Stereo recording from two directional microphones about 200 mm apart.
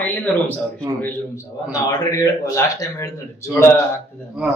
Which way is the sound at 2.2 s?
15° left (ahead or behind).